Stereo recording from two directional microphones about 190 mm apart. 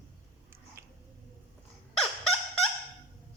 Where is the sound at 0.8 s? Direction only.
10° right (ahead or behind).